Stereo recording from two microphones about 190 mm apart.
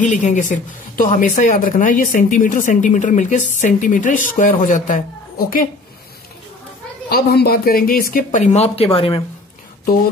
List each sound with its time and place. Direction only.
0.0 s a woman's voice: 40° left (ahead or behind)
7.1 s a woman's voice: 55° left (ahead or behind); by 9.2 s 30° left (ahead or behind)